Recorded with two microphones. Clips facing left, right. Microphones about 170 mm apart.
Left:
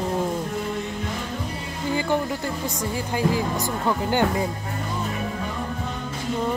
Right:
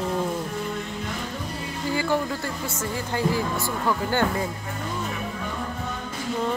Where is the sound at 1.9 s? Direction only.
20° left (ahead or behind).